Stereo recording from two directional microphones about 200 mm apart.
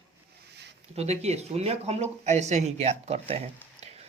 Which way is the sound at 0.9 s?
35° right (ahead or behind).